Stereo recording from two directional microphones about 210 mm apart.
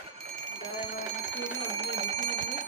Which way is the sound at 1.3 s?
10° left (ahead or behind).